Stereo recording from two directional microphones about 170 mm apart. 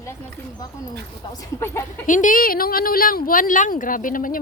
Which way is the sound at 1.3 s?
15° left (ahead or behind).